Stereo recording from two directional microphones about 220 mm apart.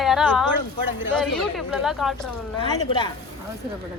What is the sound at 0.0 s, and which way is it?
A woman's voice, centre (ahead or behind).